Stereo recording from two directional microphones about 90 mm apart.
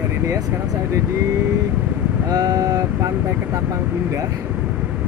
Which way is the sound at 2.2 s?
45° right (ahead or behind).